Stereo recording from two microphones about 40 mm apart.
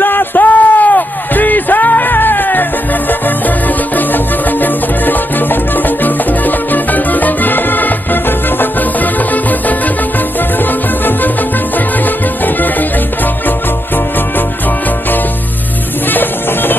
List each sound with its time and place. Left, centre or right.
0.0 s a sound: left
3.9 s music: left
16.1 s music: left